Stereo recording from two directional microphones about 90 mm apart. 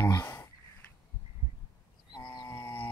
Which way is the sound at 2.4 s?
25° left (ahead or behind).